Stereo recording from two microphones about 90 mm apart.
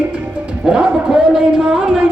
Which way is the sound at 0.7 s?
10° right (ahead or behind).